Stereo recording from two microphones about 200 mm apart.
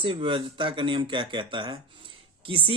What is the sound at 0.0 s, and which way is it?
Speech, 25° right (ahead or behind).